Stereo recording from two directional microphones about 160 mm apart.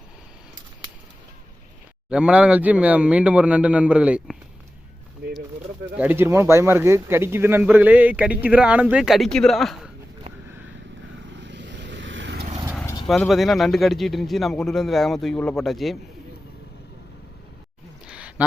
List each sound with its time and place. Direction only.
2.0 s speech: 5° right (ahead or behind)
6.0 s speech: 15° right (ahead or behind)
11.3 s vehicle: 90° right
12.8 s vehicle: 25° left (ahead or behind)
13.1 s speech: centre (ahead or behind)
18.0 s a sound: 5° right (ahead or behind)